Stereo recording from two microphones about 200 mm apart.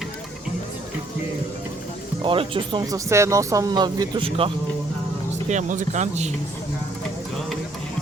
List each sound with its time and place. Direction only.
2.2 s speech: 25° right (ahead or behind)
5.5 s speech: 40° right (ahead or behind)